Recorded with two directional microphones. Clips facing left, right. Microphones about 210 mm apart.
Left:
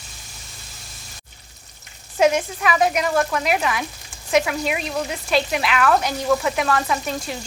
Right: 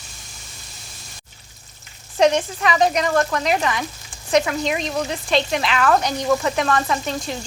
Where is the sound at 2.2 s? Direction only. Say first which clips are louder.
Right 1 dB; 5° left (ahead or behind).